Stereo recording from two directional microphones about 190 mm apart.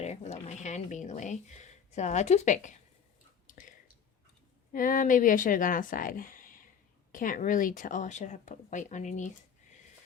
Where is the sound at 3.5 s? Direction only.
45° left (ahead or behind).